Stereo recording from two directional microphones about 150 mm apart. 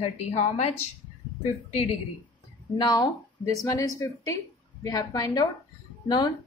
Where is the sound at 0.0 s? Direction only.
50° left (ahead or behind).